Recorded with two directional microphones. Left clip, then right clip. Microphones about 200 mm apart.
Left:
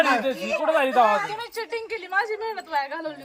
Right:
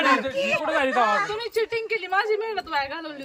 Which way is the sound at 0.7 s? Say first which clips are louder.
Left 5 dB; 50° left (ahead or behind).